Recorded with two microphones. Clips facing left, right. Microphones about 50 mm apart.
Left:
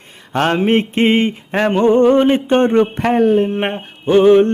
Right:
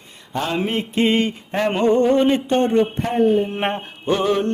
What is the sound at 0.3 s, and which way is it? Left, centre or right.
Mantra, left.